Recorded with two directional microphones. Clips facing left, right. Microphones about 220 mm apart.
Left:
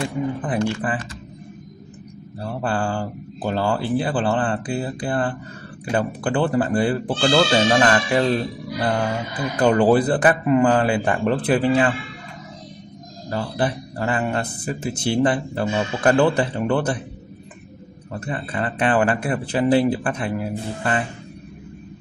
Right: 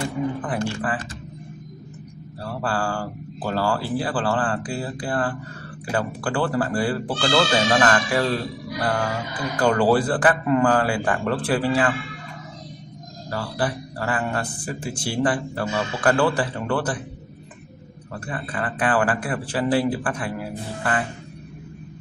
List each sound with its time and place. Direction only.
0.4 s speech: 20° left (ahead or behind)
2.4 s speech: 20° left (ahead or behind)
13.3 s speech: 20° left (ahead or behind)
18.2 s speech: 25° left (ahead or behind)